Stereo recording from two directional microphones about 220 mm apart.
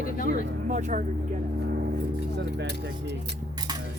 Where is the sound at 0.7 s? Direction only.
35° right (ahead or behind).